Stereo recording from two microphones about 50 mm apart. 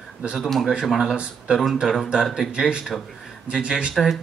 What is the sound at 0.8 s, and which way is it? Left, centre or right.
Speech, centre.